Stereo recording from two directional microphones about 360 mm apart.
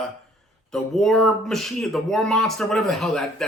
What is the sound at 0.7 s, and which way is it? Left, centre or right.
Speech, centre.